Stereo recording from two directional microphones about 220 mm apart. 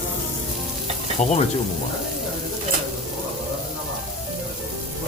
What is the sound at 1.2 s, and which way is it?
Speech, 30° left (ahead or behind).